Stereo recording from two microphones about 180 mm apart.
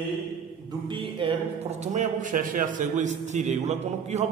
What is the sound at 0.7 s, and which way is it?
Speech, 25° right (ahead or behind).